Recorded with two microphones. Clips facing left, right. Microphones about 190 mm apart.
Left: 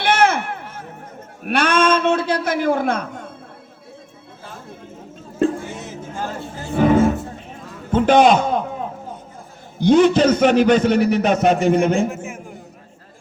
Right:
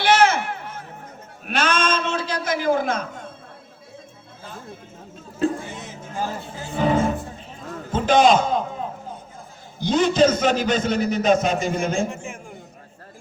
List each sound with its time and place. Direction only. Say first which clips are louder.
0.0 s run: even; 55° left (ahead or behind)
1.5 s a man's voice: left 5 dB; 60° left (ahead or behind)
6.6 s speech: left 5 dB; 55° left (ahead or behind)
7.5 s a sound: left 6 dB; 60° left (ahead or behind)
9.8 s a man's voice: left 5 dB; 60° left (ahead or behind)
12.0 s a man's voice: left 4 dB; 5° left (ahead or behind)